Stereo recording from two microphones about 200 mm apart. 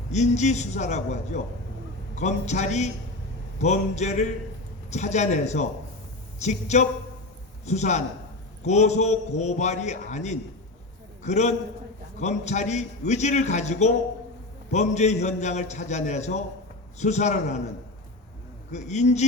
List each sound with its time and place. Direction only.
0.1 s a man's voice: 35° left (ahead or behind)
18.7 s a man's voice: 35° left (ahead or behind)